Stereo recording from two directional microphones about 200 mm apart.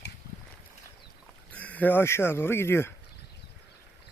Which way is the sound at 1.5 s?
10° left (ahead or behind).